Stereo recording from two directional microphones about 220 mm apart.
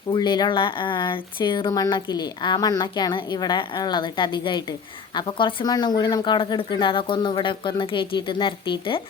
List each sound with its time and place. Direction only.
0.1 s speech: 20° left (ahead or behind)